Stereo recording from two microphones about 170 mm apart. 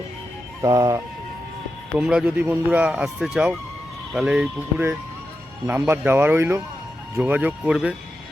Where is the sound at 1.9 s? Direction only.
5° right (ahead or behind).